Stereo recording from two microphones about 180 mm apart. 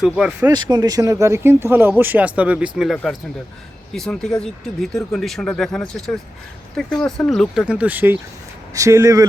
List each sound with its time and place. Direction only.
0.0 s speech: 5° right (ahead or behind)
0.5 s speech: 20° right (ahead or behind)